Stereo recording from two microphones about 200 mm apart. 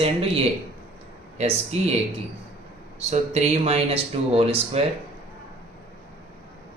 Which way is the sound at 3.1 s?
35° right (ahead or behind).